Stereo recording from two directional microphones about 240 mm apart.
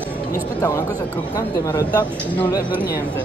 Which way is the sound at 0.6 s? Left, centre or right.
Centre.